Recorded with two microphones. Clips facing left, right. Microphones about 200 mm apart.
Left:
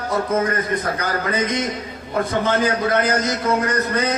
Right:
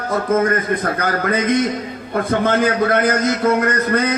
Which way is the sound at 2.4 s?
55° right (ahead or behind).